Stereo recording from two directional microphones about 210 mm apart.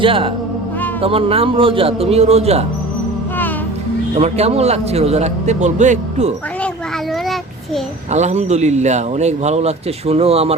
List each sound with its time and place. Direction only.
0.0 s speech: 25° right (ahead or behind)
4.2 s a man's voice: 30° right (ahead or behind)
8.1 s a man's voice: 35° right (ahead or behind)